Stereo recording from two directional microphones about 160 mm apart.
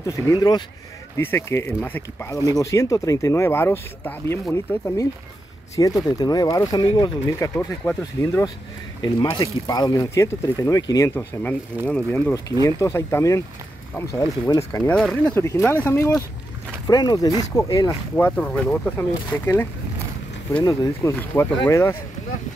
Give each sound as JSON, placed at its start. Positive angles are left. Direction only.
{"t": 0.0, "sound": "speech", "side_deg": 20}
{"t": 14.7, "sound": "speech", "side_deg": 20}
{"t": 15.0, "sound": "speech", "side_deg": 0}
{"t": 15.3, "sound": "speech", "side_deg": 15}
{"t": 16.8, "sound": "speech", "side_deg": 25}
{"t": 18.1, "sound": "speech", "side_deg": 10}